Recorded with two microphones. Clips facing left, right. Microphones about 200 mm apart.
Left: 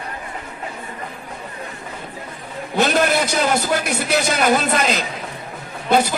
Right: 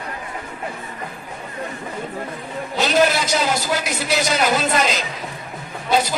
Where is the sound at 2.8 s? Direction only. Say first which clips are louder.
Left 1 dB; 55° left (ahead or behind).